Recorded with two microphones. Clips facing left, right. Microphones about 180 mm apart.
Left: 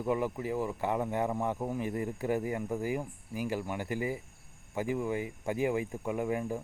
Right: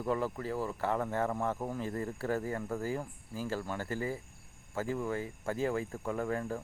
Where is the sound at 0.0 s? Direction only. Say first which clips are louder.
Left 2 dB; 15° left (ahead or behind).